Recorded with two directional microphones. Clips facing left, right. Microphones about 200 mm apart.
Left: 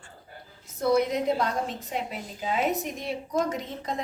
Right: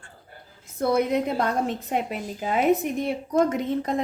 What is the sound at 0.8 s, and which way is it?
A woman's voice, 55° right (ahead or behind).